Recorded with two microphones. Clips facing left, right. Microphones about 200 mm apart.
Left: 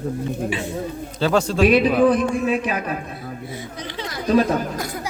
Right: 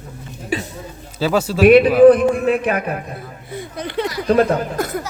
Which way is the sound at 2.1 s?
60° right (ahead or behind).